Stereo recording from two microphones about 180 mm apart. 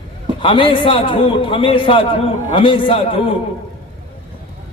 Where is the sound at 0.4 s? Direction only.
30° left (ahead or behind).